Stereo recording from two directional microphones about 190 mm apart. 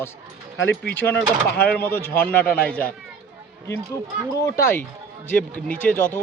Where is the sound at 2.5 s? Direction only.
50° left (ahead or behind).